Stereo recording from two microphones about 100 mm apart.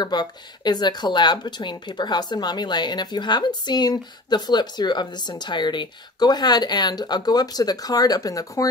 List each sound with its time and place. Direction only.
0.0 s speech: 45° left (ahead or behind)